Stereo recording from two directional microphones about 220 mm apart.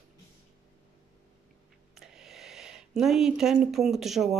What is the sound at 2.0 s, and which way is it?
Speech, centre (ahead or behind).